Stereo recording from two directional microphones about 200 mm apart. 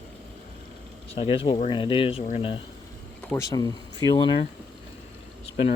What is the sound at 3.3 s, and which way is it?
Speech, 15° left (ahead or behind).